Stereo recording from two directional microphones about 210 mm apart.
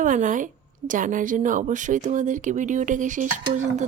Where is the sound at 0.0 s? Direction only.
40° right (ahead or behind).